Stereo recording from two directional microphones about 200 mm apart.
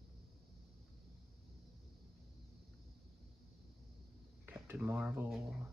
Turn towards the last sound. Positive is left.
turn(degrees=-5)  # may be behind; listen again after turning